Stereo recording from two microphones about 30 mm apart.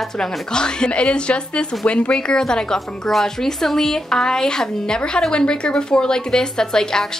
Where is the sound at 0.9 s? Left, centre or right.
Left.